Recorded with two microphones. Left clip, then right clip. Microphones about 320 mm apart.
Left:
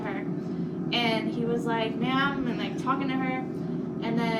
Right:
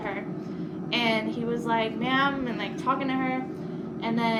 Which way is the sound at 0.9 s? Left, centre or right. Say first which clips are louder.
Right 1 dB; centre.